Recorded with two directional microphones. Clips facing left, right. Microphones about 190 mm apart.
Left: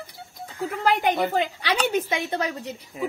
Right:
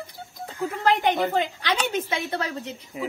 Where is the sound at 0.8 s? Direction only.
10° left (ahead or behind).